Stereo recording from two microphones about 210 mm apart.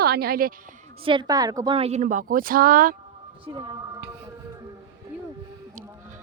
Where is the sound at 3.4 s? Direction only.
20° right (ahead or behind).